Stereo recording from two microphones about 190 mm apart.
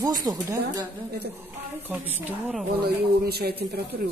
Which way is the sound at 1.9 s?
10° right (ahead or behind).